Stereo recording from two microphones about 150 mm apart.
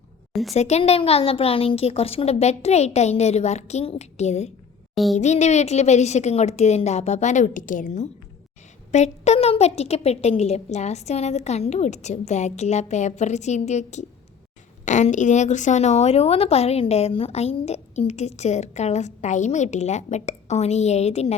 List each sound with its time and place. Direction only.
0.5 s a woman's voice: 45° left (ahead or behind)